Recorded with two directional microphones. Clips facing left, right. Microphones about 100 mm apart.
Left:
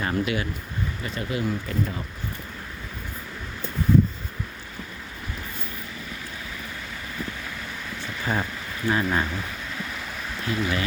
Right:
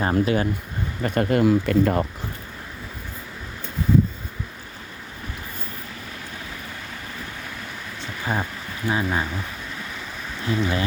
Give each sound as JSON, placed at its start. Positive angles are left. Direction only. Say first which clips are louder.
{"t": 0.0, "sound": "speech", "louder": "right 5 dB", "side_deg": -35}
{"t": 1.0, "sound": "speech", "louder": "right 11 dB", "side_deg": -55}
{"t": 8.2, "sound": "speech", "louder": "right 1 dB", "side_deg": -10}
{"t": 10.4, "sound": "speech", "louder": "right 3 dB", "side_deg": -30}